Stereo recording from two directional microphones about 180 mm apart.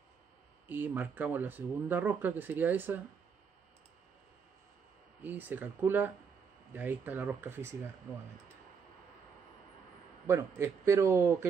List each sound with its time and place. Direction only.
0.7 s speech: 10° right (ahead or behind)
5.2 s speech: 10° right (ahead or behind)
10.2 s speech: 15° right (ahead or behind)